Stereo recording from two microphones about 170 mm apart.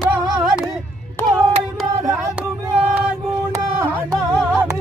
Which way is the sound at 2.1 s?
15° right (ahead or behind).